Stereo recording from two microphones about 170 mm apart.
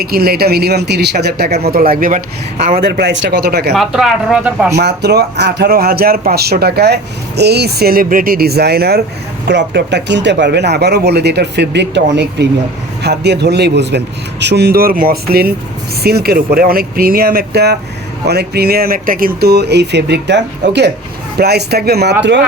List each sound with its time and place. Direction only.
0.0 s speech: 65° right (ahead or behind)
1.7 s speech: 60° right (ahead or behind)
2.7 s speech: 65° right (ahead or behind)
3.8 s speech: centre (ahead or behind)
4.8 s speech: 75° right (ahead or behind)
9.5 s speech: 90° right
13.0 s speech: 80° right
21.3 s speech: 70° right (ahead or behind)